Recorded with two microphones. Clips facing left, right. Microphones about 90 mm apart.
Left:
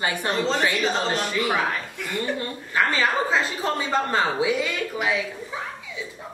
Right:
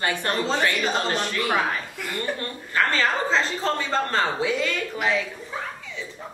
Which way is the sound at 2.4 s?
10° left (ahead or behind).